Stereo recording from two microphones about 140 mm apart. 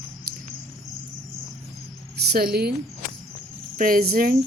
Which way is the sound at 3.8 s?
85° right.